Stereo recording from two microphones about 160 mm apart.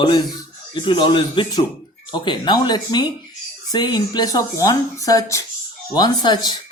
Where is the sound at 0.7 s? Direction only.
30° left (ahead or behind).